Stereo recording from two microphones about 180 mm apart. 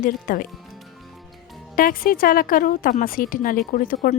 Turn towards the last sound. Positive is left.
turn(degrees=50)  # may be behind; listen again after turning